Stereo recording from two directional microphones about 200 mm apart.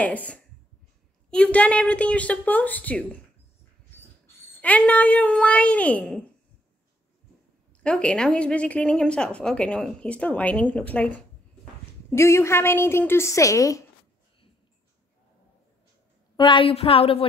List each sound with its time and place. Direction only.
0.0 s a woman's voice: 5° left (ahead or behind)
4.6 s a woman's voice: 5° left (ahead or behind)
7.8 s a woman's voice: 5° left (ahead or behind)
16.3 s speech: 25° left (ahead or behind)